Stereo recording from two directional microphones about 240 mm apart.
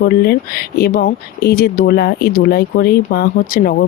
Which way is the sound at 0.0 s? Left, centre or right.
Left.